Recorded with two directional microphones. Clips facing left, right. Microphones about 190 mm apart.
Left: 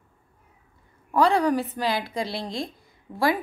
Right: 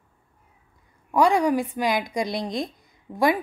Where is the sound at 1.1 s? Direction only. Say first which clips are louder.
Right 1 dB; 15° right (ahead or behind).